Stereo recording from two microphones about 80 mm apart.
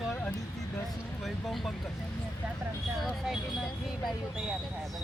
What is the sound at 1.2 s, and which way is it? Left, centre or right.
Speech, centre.